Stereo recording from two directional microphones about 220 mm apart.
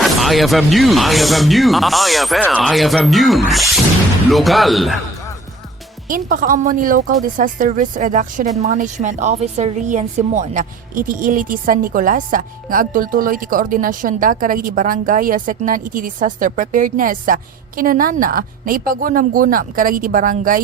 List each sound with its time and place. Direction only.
0.0 s speech: centre (ahead or behind)
6.1 s a woman's voice: 40° right (ahead or behind)